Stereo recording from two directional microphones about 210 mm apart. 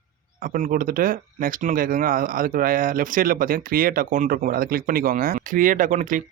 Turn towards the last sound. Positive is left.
turn(degrees=-40)  # may be behind; listen again after turning